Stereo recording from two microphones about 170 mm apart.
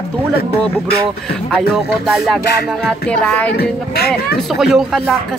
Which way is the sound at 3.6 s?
65° left (ahead or behind).